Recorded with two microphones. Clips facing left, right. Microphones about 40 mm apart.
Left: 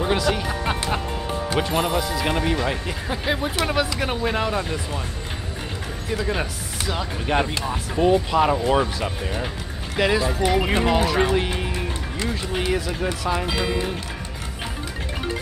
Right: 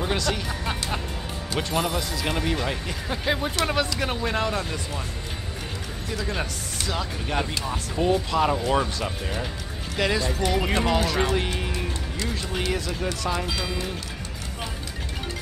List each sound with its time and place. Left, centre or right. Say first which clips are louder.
0.0 s music: left 4 dB; centre
0.4 s music: left 5 dB; left
1.6 s speech: left 2 dB; left
6.1 s speech: left 4 dB; centre
13.5 s speech: left 5 dB; left